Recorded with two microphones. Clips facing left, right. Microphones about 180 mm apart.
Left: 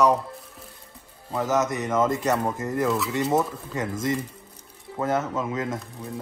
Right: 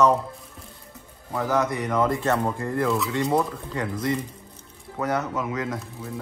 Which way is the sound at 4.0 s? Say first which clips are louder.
Even; 25° left (ahead or behind).